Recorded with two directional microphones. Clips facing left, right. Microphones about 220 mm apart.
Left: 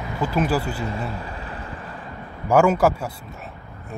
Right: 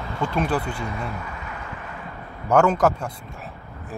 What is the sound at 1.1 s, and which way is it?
Vehicle, 30° left (ahead or behind).